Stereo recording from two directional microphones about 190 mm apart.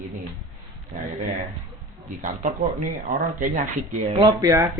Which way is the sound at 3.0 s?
40° right (ahead or behind).